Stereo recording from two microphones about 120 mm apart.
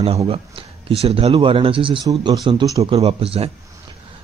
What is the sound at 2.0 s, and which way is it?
Speech, 35° right (ahead or behind).